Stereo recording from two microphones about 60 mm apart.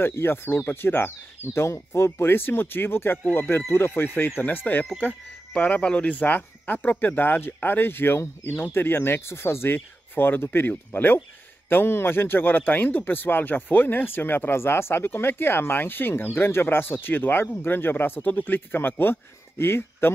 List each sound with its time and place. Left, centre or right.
0.0 s speech: left